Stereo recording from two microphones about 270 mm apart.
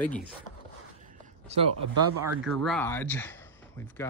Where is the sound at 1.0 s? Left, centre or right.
Right.